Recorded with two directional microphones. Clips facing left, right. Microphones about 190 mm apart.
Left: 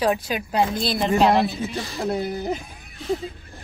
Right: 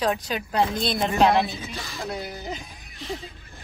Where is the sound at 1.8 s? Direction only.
35° left (ahead or behind).